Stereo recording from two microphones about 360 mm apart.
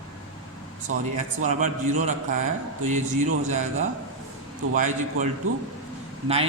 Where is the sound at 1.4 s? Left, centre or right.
Centre.